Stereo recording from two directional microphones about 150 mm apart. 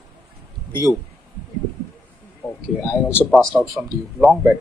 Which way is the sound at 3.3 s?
Centre (ahead or behind).